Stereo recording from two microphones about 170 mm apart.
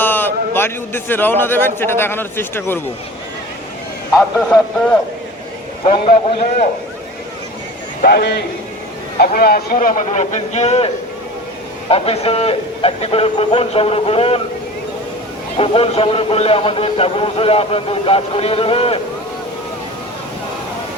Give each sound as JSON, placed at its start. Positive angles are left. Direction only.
{"t": 0.0, "sound": "a man's voice", "side_deg": 10}
{"t": 5.8, "sound": "speech", "side_deg": 35}
{"t": 8.0, "sound": "a man's voice", "side_deg": 70}
{"t": 9.1, "sound": "speech", "side_deg": 60}
{"t": 9.7, "sound": "speech", "side_deg": 45}
{"t": 15.5, "sound": "speech", "side_deg": 35}